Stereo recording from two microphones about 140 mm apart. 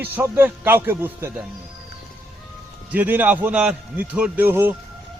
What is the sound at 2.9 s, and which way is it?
A man's voice, 15° right (ahead or behind).